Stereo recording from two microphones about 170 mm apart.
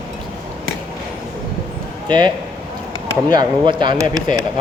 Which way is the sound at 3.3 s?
25° right (ahead or behind).